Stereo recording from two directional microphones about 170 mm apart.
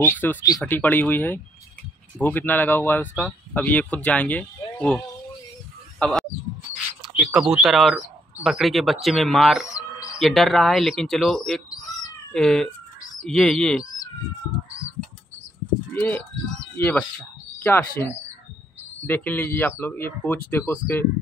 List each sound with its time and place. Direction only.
0.0 s speech: 10° left (ahead or behind)
5.9 s a sound: 5° left (ahead or behind)
7.0 s speech: 5° right (ahead or behind)
11.7 s bird: 20° left (ahead or behind)
12.3 s speech: 5° left (ahead or behind)
15.9 s speech: 10° left (ahead or behind)